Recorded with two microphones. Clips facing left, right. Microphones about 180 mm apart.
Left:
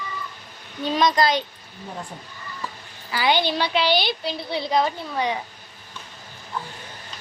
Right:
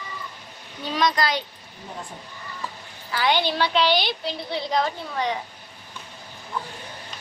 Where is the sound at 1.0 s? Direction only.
25° left (ahead or behind).